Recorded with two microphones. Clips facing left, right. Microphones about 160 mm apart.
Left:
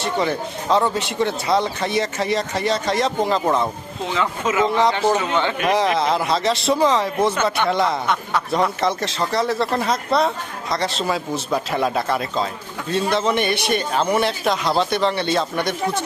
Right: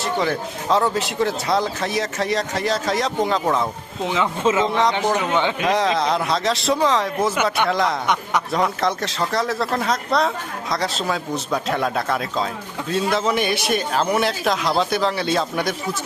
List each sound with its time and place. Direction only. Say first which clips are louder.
0.0 s speech: even; centre (ahead or behind)
4.0 s speech: right 2 dB; 20° right (ahead or behind)
4.6 s speech: left 2 dB; centre (ahead or behind)
5.3 s speech: even; 15° right (ahead or behind)
5.6 s speech: left 3 dB; centre (ahead or behind)
8.0 s speech: even; 15° right (ahead or behind)
8.5 s speech: left 2 dB; centre (ahead or behind)